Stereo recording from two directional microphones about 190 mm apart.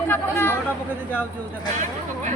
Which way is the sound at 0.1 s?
10° left (ahead or behind).